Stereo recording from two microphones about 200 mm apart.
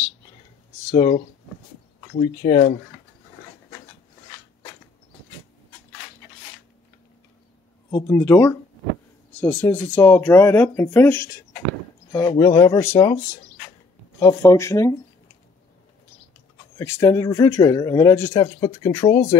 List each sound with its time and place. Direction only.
2.1 s speech: 25° left (ahead or behind)
7.9 s speech: 15° left (ahead or behind)
14.2 s speech: 15° left (ahead or behind)
16.7 s speech: 15° left (ahead or behind)